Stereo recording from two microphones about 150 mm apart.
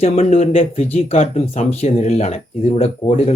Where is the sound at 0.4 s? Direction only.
40° left (ahead or behind).